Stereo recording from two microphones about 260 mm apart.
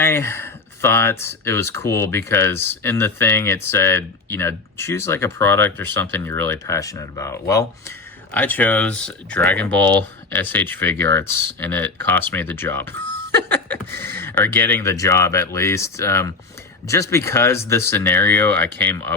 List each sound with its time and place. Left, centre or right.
0.0 s speech: centre